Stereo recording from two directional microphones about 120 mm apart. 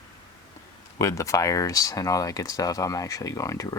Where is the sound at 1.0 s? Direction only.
25° left (ahead or behind).